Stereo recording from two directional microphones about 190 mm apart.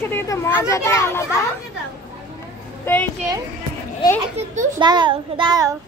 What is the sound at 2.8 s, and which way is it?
Speech, 10° left (ahead or behind).